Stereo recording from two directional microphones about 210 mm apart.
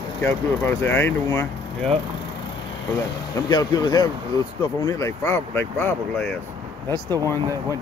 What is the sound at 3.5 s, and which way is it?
Speech, 20° left (ahead or behind).